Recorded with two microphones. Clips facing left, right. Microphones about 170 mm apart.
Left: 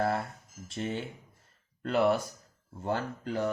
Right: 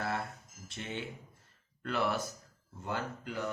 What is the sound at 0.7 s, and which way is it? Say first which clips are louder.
Speech: left 7 dB; 40° left (ahead or behind).